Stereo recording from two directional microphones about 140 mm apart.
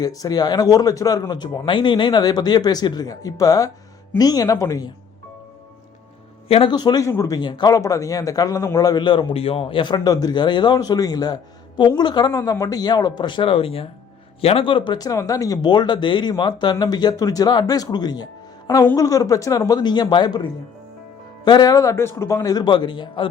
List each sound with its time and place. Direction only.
0.0 s speech: 25° left (ahead or behind)
6.5 s speech: 35° left (ahead or behind)